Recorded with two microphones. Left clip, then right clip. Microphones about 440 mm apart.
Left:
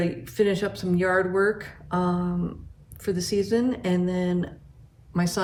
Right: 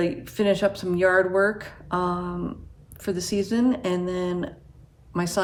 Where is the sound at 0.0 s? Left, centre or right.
Centre.